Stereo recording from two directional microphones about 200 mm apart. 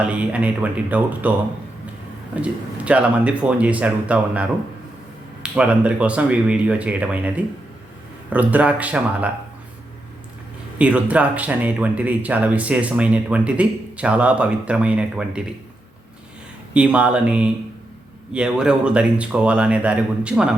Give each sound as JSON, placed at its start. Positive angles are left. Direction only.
{"t": 0.0, "sound": "speech", "side_deg": -5}
{"t": 2.3, "sound": "speech", "side_deg": -5}
{"t": 10.8, "sound": "speech", "side_deg": -5}
{"t": 16.7, "sound": "speech", "side_deg": -5}